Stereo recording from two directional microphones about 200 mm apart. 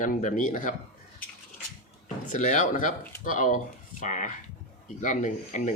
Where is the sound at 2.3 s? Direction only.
40° left (ahead or behind).